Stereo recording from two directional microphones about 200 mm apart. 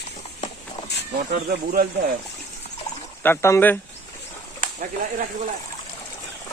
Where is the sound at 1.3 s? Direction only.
50° right (ahead or behind).